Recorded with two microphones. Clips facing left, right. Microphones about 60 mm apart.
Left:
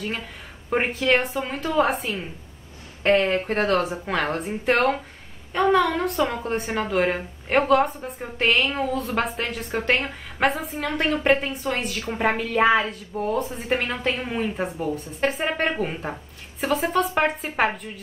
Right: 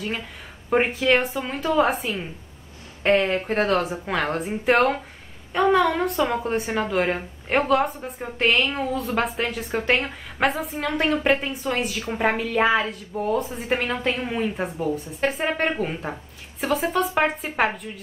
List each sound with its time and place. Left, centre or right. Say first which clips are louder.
0.7 s speech: right 2 dB; centre